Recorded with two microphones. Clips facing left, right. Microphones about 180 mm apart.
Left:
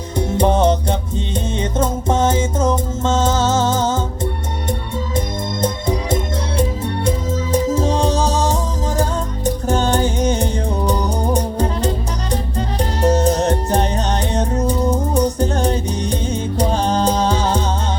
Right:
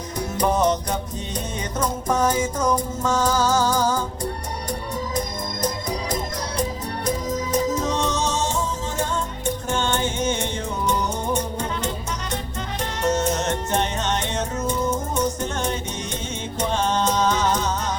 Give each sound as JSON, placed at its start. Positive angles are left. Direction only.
{"t": 0.2, "sound": "music", "side_deg": 25}
{"t": 5.6, "sound": "music", "side_deg": 25}